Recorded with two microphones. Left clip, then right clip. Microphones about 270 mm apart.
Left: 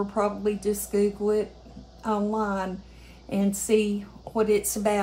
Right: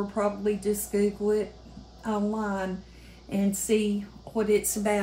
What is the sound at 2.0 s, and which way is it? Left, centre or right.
Speech, centre.